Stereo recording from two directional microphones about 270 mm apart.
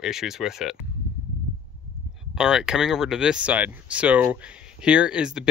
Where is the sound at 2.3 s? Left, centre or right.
Centre.